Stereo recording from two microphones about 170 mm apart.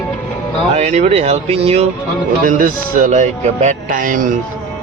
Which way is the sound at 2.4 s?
55° right (ahead or behind).